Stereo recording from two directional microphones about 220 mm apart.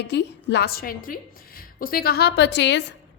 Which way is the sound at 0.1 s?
50° left (ahead or behind).